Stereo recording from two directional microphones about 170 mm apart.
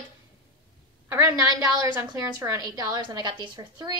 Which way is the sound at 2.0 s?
20° right (ahead or behind).